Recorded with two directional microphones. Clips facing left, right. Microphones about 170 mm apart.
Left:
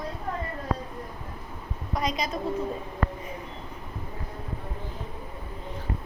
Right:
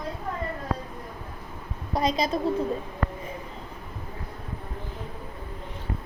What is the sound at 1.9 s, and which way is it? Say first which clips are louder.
Speech: right 4 dB; 30° right (ahead or behind).